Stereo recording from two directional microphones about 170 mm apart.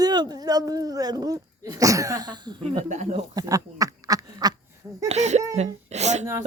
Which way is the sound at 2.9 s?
45° right (ahead or behind).